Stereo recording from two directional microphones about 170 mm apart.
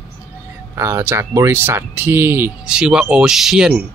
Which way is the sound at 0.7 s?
15° right (ahead or behind).